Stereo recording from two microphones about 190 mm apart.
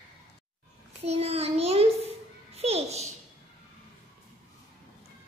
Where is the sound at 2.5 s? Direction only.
35° right (ahead or behind).